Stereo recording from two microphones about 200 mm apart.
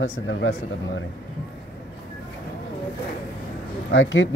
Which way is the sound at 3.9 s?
70° left (ahead or behind).